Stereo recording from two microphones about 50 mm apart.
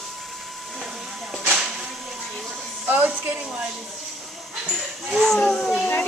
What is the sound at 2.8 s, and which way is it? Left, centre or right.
Speech, right.